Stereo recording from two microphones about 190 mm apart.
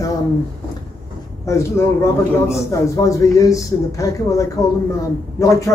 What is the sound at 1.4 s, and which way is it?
Speech, 15° left (ahead or behind).